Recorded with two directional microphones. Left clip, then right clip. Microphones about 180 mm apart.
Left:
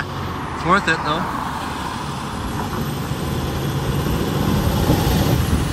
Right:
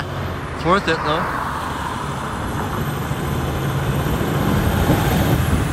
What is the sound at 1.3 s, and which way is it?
Vehicle, 35° left (ahead or behind).